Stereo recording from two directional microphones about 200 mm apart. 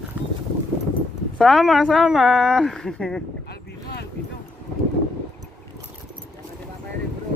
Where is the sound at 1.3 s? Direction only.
Centre (ahead or behind).